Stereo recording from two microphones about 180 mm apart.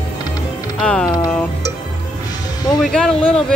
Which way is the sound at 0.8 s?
5° left (ahead or behind).